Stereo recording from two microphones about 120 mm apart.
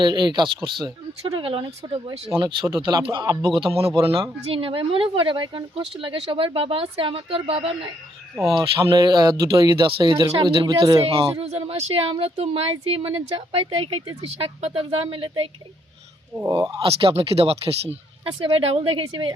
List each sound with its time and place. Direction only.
0.0 s speech: 40° right (ahead or behind); by 7.9 s 55° right (ahead or behind)
8.4 s speech: centre (ahead or behind)
8.9 s speech: 35° right (ahead or behind)
11.0 s speech: 55° right (ahead or behind)
16.5 s speech: 35° right (ahead or behind)
16.8 s speech: 50° right (ahead or behind)